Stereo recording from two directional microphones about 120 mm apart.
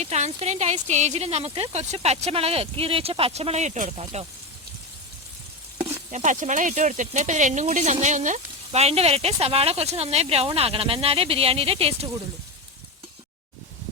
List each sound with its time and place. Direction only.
0.0 s speech: 65° right (ahead or behind)
5.8 s stir: 75° right (ahead or behind)
8.0 s speech: 90° right; by 12.0 s 55° right (ahead or behind)